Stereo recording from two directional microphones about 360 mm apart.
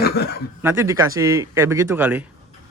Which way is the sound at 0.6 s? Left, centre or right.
Centre.